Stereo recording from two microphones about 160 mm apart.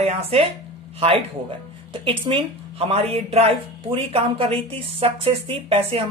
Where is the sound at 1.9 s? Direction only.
30° right (ahead or behind).